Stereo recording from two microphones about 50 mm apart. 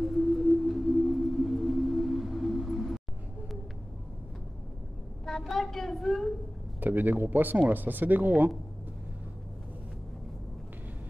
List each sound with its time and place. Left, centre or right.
0.0 s music: centre
5.2 s a sound: centre
6.8 s speech: right